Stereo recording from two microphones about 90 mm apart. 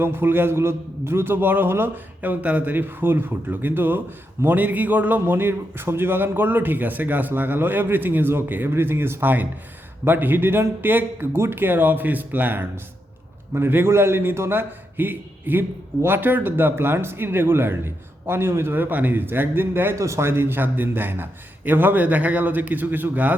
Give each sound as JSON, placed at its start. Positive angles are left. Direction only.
{"t": 0.0, "sound": "a man's voice", "side_deg": -25}